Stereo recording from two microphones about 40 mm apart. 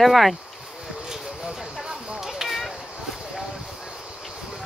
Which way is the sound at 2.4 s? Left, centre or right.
Centre.